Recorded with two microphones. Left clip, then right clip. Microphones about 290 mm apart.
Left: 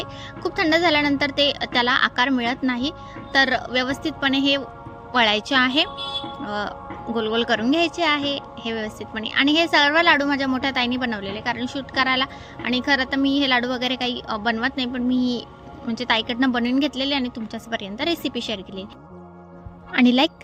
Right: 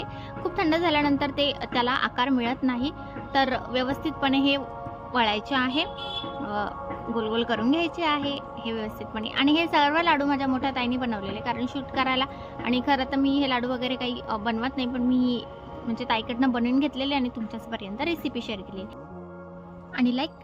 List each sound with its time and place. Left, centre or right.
0.0 s a woman's voice: centre
19.9 s speech: left